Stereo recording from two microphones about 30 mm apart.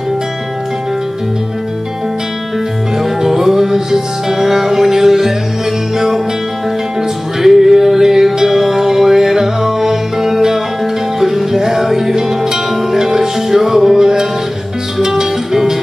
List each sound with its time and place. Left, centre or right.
3.0 s music: centre